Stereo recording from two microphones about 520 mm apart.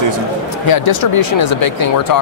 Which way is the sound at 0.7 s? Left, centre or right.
Left.